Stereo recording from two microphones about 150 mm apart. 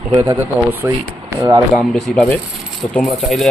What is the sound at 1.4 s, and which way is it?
Speech, 30° right (ahead or behind).